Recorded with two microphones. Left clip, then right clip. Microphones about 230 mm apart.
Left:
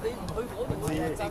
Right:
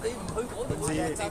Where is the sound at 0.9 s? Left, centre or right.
Right.